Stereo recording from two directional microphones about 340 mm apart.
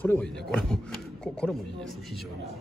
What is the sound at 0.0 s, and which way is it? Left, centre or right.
Speech, centre.